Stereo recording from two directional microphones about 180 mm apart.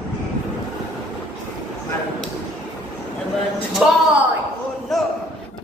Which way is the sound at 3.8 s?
5° right (ahead or behind).